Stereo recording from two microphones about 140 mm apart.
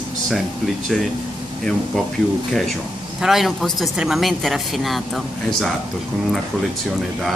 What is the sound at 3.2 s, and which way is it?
Speech, centre (ahead or behind).